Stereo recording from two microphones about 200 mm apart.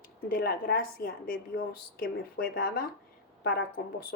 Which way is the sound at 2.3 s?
50° left (ahead or behind).